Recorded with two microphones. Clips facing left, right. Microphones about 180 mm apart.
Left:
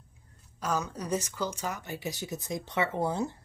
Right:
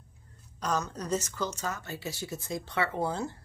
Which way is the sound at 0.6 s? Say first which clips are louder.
Even; 10° left (ahead or behind).